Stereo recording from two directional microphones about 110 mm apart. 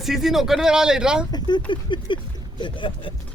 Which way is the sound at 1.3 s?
40° left (ahead or behind).